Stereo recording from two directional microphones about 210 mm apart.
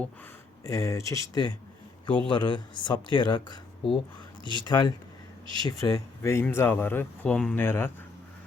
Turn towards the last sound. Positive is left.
turn(degrees=10)  # may be behind; listen again after turning